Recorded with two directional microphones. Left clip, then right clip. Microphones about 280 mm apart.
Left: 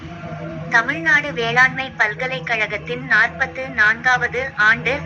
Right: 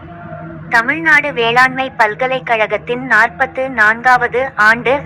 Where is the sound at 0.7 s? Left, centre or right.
Centre.